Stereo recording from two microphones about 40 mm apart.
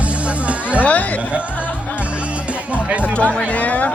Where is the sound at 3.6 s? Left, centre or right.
Left.